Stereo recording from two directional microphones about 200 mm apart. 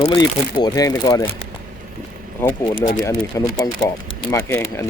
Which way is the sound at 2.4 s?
10° left (ahead or behind).